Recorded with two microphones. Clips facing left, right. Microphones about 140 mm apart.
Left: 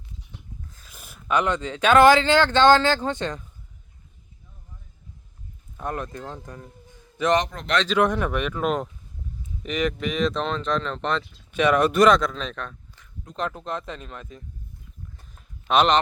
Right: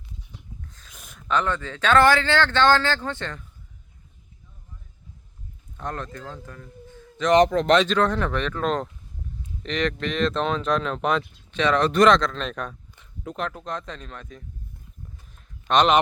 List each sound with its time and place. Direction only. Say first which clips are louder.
0.7 s speech: left 1 dB; 5° left (ahead or behind)
5.7 s speech: left 2 dB; 10° left (ahead or behind)
7.4 s speech: right 15 dB; 90° right
7.9 s speech: left 1 dB; 15° left (ahead or behind); by 11.3 s 5° right (ahead or behind)
11.5 s speech: left 1 dB; 10° left (ahead or behind)
12.5 s speech: right 3 dB; 10° right (ahead or behind)
13.0 s a sound: even; 20° right (ahead or behind)
13.3 s speech: left 2 dB; centre (ahead or behind)
15.6 s speech: even; 5° left (ahead or behind)